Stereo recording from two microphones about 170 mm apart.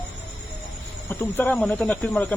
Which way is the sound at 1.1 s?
10° left (ahead or behind).